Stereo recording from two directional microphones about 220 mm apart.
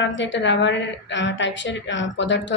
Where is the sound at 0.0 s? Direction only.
55° left (ahead or behind).